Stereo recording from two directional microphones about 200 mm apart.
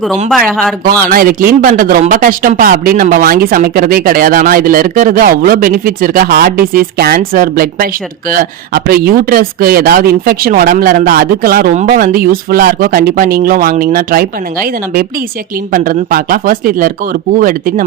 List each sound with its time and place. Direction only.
0.3 s speech: centre (ahead or behind)
1.0 s speech: 45° right (ahead or behind)